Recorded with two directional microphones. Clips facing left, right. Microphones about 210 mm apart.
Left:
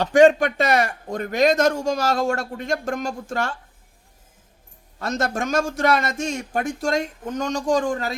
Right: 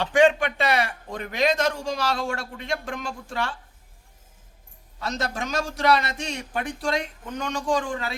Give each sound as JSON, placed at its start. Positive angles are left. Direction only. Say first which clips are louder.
{"t": 0.0, "sound": "a man's voice", "louder": "left 5 dB", "side_deg": 40}
{"t": 4.9, "sound": "a man's voice", "louder": "left 5 dB", "side_deg": 50}